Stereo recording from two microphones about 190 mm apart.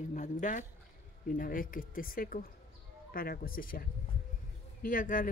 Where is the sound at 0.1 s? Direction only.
40° left (ahead or behind).